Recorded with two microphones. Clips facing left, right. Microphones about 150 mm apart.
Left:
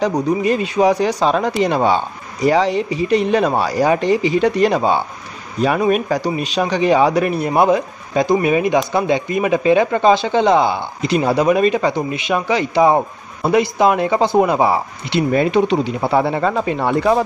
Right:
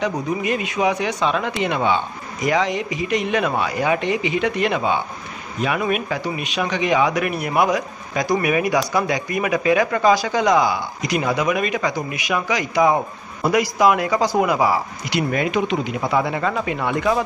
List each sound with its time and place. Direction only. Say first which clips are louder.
0.0 s speech: left 6 dB; 35° left (ahead or behind)